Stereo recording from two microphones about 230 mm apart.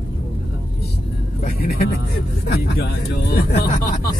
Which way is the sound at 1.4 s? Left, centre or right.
Left.